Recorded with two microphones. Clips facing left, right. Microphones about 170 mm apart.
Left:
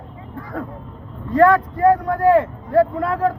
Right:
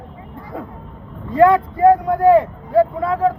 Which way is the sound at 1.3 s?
15° right (ahead or behind).